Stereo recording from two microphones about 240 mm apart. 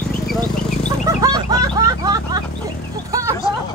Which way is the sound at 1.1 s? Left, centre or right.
Centre.